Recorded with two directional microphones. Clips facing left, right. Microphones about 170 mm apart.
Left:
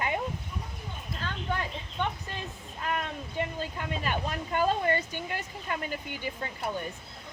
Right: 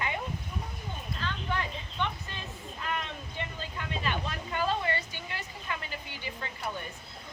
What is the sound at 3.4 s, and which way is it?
Speech, 40° left (ahead or behind).